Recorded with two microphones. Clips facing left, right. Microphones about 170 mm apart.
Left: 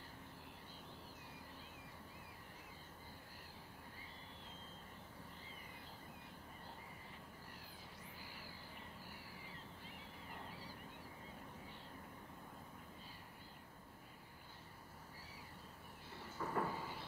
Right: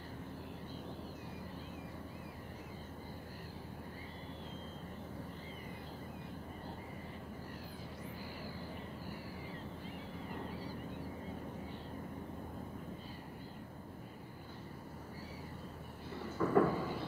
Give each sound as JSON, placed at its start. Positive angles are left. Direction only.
{"t": 16.3, "sound": "thunder", "side_deg": -90}